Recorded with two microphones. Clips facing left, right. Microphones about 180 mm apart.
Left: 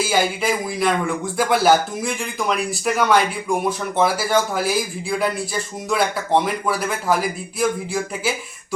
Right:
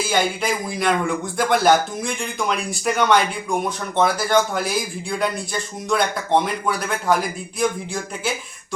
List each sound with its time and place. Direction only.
0.0 s speech: 5° left (ahead or behind)